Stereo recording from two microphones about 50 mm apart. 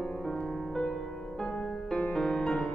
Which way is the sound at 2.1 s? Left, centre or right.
Centre.